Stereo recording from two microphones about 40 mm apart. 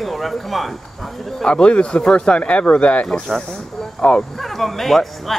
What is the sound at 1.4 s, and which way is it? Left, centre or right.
Speech, left.